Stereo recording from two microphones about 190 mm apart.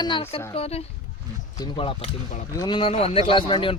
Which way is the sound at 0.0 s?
25° left (ahead or behind).